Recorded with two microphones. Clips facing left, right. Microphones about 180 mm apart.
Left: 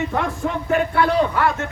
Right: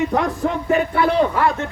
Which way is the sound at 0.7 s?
20° right (ahead or behind).